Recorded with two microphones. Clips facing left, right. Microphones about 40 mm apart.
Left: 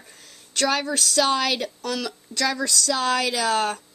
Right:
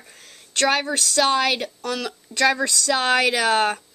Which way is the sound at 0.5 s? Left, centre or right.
Right.